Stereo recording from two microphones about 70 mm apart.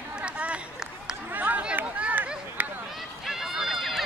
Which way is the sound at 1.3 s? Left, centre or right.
Right.